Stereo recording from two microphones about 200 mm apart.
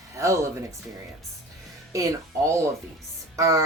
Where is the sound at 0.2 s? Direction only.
15° right (ahead or behind).